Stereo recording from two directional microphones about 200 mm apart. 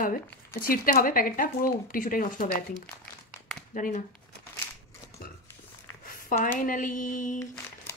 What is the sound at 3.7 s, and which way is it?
Speech, 40° left (ahead or behind).